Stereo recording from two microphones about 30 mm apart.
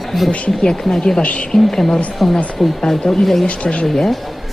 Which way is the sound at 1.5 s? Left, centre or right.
Centre.